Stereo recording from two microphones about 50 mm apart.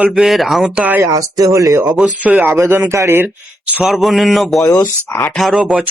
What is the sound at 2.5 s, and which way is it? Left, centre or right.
Speech, right.